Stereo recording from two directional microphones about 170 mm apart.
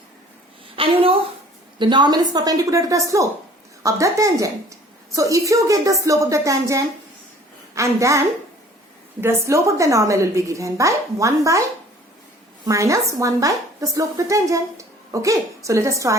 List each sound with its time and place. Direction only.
0.8 s a woman's voice: 35° right (ahead or behind); by 8.2 s 15° right (ahead or behind)
9.2 s a woman's voice: 15° right (ahead or behind)
12.6 s speech: 20° right (ahead or behind)